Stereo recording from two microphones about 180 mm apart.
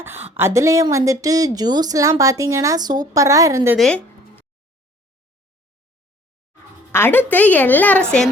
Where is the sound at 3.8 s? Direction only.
5° left (ahead or behind).